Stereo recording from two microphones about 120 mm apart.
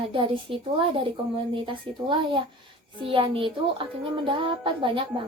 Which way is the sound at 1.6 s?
45° right (ahead or behind).